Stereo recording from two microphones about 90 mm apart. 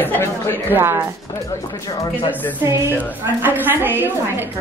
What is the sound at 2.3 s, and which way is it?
Speech, 20° left (ahead or behind).